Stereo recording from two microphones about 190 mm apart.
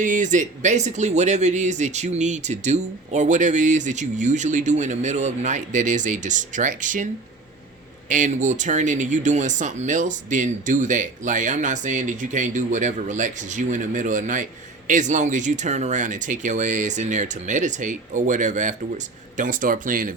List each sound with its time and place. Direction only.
0.0 s speech: 40° right (ahead or behind)
8.1 s speech: 40° right (ahead or behind)